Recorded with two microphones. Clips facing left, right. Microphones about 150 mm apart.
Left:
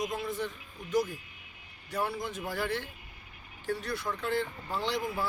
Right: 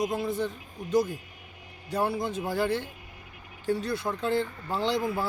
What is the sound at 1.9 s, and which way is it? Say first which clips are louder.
Speech: right 5 dB; 30° right (ahead or behind).